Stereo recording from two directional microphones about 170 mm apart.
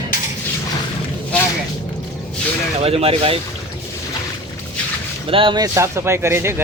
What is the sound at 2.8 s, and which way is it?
Speech, 35° right (ahead or behind).